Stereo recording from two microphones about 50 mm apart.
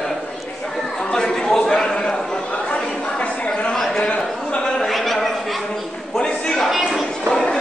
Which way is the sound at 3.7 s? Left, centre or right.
Centre.